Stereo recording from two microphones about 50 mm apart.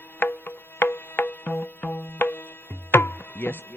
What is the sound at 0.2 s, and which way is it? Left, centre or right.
Music, left.